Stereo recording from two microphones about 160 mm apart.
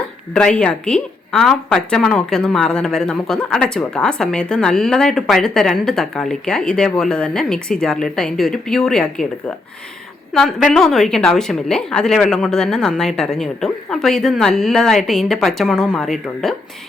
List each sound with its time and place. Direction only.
0.3 s a woman's voice: 5° left (ahead or behind)
10.7 s a woman's voice: centre (ahead or behind)